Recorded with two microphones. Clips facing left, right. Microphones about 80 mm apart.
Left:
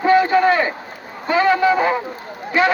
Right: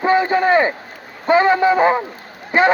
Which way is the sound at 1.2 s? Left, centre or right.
Right.